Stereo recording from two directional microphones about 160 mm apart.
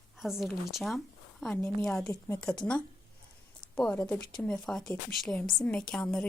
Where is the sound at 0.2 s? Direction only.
Centre (ahead or behind).